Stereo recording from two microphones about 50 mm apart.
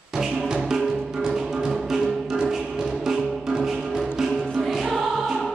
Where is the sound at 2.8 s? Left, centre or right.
Centre.